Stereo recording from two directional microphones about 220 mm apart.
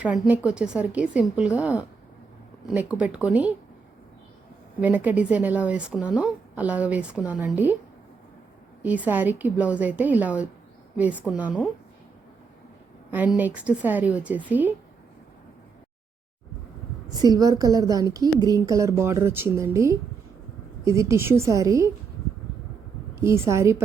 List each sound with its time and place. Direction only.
0.0 s a woman's voice: 5° right (ahead or behind)
4.8 s speech: 5° right (ahead or behind)
8.8 s speech: 5° right (ahead or behind)
13.1 s speech: 5° right (ahead or behind)
17.2 s speech: 15° right (ahead or behind)
23.2 s speech: 10° right (ahead or behind)